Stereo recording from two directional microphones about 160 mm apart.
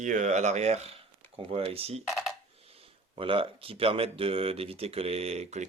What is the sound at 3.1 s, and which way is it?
Speech, 35° right (ahead or behind).